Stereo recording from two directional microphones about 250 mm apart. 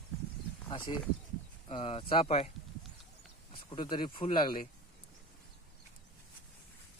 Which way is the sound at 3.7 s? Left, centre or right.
Centre.